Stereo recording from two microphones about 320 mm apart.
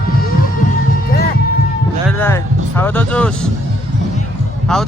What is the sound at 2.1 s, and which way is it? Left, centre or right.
Speech, centre.